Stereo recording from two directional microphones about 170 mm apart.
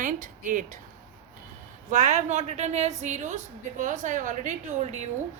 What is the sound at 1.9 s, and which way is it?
A woman's voice, 45° right (ahead or behind).